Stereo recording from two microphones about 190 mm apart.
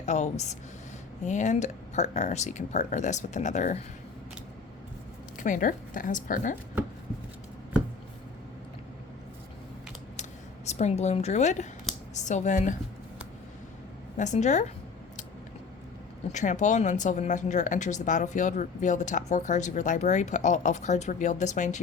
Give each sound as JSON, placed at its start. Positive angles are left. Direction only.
{"t": 0.0, "sound": "a woman's voice", "side_deg": 35}
{"t": 5.4, "sound": "a woman's voice", "side_deg": 45}
{"t": 10.7, "sound": "a woman's voice", "side_deg": 35}
{"t": 14.2, "sound": "a woman's voice", "side_deg": 40}
{"t": 16.3, "sound": "a woman's voice", "side_deg": 40}